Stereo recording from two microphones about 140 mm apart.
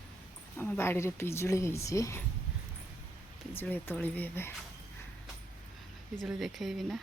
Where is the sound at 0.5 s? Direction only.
15° left (ahead or behind).